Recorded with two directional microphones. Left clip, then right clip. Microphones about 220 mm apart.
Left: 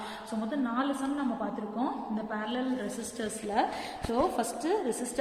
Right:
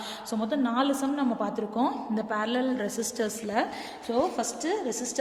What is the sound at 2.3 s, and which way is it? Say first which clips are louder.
Speech: right 6 dB; 50° right (ahead or behind).